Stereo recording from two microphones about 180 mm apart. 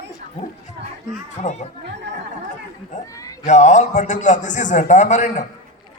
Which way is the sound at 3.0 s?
20° left (ahead or behind).